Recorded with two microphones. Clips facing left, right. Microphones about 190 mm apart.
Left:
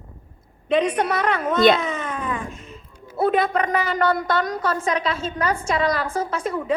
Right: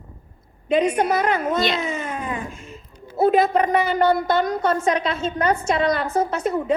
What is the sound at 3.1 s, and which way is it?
A woman's voice, 30° right (ahead or behind).